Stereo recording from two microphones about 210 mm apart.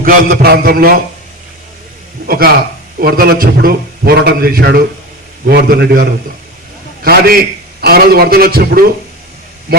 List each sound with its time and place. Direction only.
0.0 s a man's voice: 40° right (ahead or behind)
2.2 s a man's voice: 45° right (ahead or behind)